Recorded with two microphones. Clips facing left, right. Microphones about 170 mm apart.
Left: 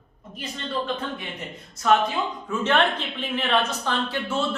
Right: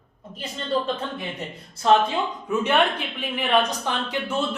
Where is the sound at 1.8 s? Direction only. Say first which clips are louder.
Right 2 dB; 30° right (ahead or behind).